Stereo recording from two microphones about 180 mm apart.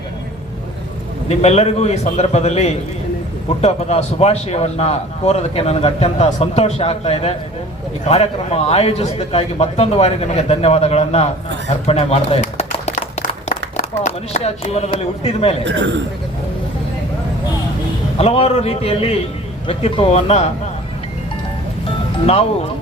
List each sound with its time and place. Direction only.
1.4 s a man's voice: 35° left (ahead or behind)
11.9 s a sound: 35° left (ahead or behind)
13.7 s speech: 40° left (ahead or behind)
15.6 s a man's voice: 90° right
18.2 s a man's voice: 35° left (ahead or behind)